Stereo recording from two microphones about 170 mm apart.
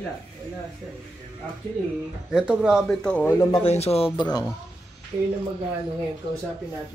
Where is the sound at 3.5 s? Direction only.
35° left (ahead or behind).